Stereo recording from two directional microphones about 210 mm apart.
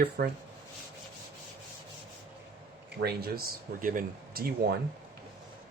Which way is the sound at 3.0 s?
50° right (ahead or behind).